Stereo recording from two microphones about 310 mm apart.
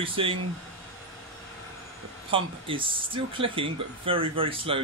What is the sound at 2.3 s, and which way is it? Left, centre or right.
Speech, centre.